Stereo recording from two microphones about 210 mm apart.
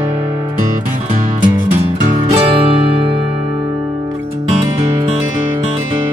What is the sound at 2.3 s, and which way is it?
Music, 25° right (ahead or behind).